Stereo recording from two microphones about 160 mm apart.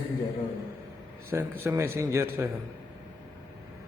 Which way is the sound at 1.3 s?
15° right (ahead or behind).